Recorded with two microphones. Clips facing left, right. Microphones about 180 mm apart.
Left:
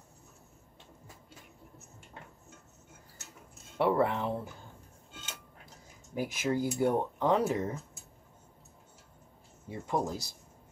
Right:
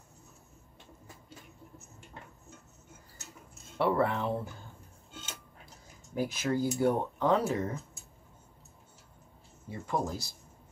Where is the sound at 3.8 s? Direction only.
15° left (ahead or behind).